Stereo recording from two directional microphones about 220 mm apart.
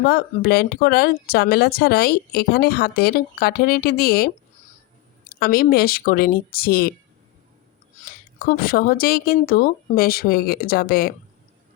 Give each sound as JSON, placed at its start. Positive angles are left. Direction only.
{"t": 0.0, "sound": "speech", "side_deg": 45}
{"t": 8.1, "sound": "speech", "side_deg": 40}